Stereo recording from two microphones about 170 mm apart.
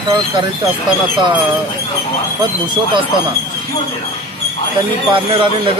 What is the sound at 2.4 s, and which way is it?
Speech, 25° right (ahead or behind).